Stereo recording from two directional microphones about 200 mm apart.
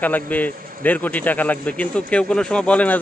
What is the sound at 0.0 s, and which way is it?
A man's voice, 10° left (ahead or behind).